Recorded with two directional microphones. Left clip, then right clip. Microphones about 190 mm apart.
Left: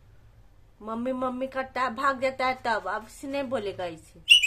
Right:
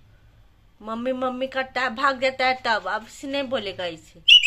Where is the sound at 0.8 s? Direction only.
5° right (ahead or behind).